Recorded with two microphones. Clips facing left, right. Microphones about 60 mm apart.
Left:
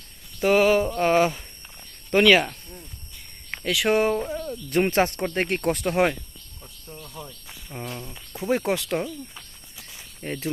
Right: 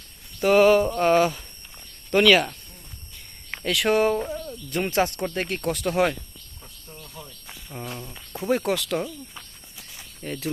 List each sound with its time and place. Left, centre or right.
0.4 s mantra: centre
1.2 s mantra: centre
3.5 s speech: centre
3.9 s mantra: centre
4.3 s a sound: centre
4.9 s speech: left
5.8 s mantra: centre
6.8 s cricket: centre
7.9 s speech: centre
8.4 s mantra: centre
8.6 s speech: left
10.2 s speech: left